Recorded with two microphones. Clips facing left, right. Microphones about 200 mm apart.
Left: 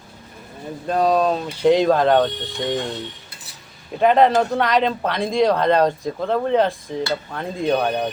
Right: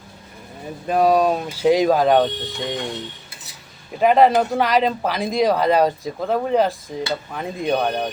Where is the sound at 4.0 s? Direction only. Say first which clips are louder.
Even; 5° right (ahead or behind).